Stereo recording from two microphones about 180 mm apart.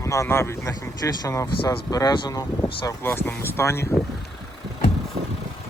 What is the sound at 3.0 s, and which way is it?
Speech, 10° left (ahead or behind).